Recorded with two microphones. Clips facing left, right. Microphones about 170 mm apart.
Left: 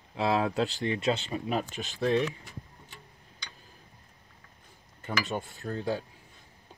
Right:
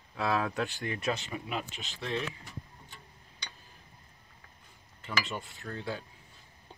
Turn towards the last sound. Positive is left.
turn(degrees=40)  # may be behind; listen again after turning